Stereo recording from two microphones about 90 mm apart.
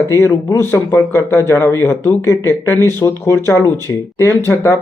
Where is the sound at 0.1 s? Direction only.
35° left (ahead or behind).